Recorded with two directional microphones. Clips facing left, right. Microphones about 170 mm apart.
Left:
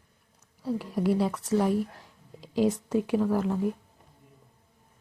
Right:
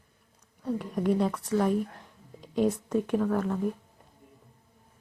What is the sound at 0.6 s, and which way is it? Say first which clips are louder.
Speech: left 1 dB; 5° left (ahead or behind).